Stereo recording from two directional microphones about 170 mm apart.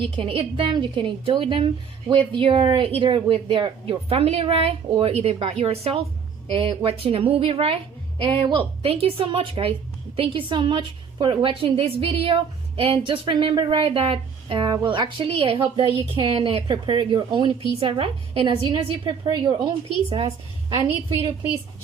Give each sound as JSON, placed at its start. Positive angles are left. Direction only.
{"t": 0.0, "sound": "a woman's voice", "side_deg": -30}